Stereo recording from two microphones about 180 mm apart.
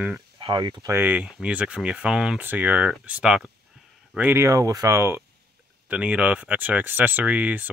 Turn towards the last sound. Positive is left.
turn(degrees=-10)  # may be behind; listen again after turning